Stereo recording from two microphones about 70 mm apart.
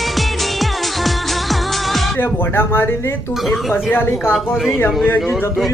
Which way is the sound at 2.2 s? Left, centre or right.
Left.